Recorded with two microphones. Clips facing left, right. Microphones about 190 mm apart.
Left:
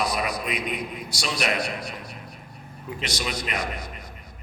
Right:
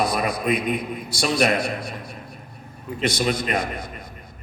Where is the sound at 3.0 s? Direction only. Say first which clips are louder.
Right 9 dB; 50° right (ahead or behind).